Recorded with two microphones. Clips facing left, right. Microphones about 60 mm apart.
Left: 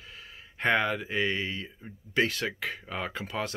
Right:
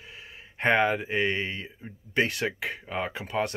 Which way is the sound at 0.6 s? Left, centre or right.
Right.